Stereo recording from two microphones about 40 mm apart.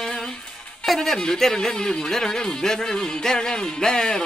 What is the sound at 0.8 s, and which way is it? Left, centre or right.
Speech, centre.